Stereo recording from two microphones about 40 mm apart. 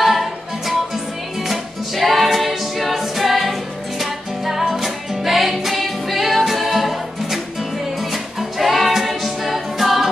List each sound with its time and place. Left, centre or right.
0.0 s music: centre